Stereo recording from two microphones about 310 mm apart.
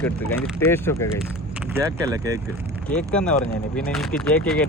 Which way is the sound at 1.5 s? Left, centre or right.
Centre.